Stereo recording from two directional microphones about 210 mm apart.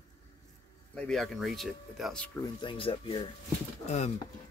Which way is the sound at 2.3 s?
25° left (ahead or behind).